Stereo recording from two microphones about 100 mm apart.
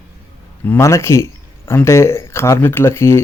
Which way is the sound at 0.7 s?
25° left (ahead or behind).